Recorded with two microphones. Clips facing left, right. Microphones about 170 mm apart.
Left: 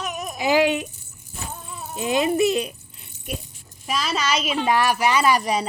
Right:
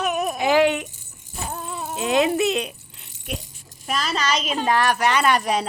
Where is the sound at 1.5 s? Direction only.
75° right (ahead or behind).